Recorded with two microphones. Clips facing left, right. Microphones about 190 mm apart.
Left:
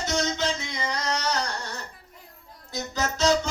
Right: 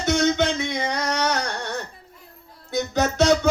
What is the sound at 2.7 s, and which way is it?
Music, 60° right (ahead or behind).